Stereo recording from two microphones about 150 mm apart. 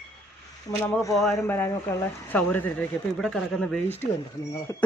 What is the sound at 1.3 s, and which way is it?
Speech, 15° left (ahead or behind).